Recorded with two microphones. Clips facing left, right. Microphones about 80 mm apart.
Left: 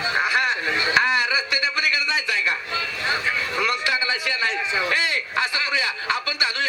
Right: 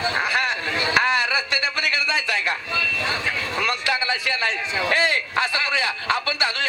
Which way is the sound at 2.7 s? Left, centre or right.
Left.